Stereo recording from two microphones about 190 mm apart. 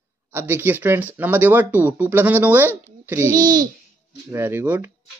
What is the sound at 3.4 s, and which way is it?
Speech, 45° right (ahead or behind).